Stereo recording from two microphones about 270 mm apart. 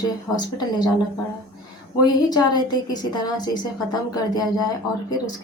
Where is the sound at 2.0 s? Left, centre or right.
Centre.